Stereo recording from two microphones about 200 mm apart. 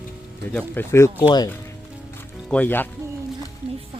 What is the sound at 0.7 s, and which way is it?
Speech, 10° left (ahead or behind).